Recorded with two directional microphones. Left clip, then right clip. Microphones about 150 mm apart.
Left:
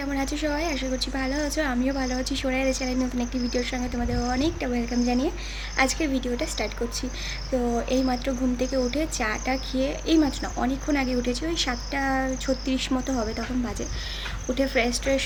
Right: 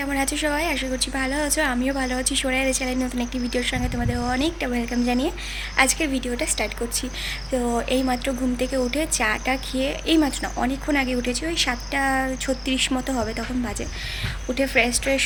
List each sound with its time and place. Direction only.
0.0 s a woman's voice: centre (ahead or behind)
7.8 s a woman's voice: 5° left (ahead or behind)
14.5 s a woman's voice: 10° left (ahead or behind)